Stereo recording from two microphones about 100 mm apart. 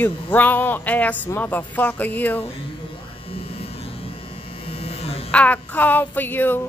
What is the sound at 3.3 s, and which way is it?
Electric shaver, 80° left.